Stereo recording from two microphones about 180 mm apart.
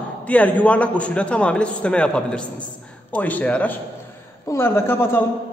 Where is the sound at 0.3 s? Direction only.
10° left (ahead or behind).